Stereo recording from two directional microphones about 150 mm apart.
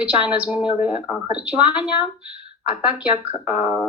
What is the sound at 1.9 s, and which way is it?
Speech, 30° left (ahead or behind).